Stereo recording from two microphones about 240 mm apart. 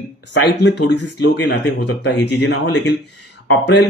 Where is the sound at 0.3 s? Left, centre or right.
Left.